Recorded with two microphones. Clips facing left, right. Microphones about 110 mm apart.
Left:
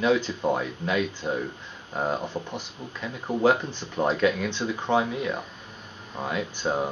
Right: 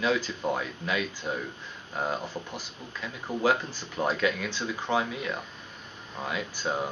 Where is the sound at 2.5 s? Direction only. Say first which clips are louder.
Left 4 dB; centre (ahead or behind).